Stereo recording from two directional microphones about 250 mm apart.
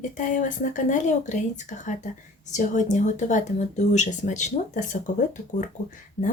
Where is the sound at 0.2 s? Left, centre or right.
Left.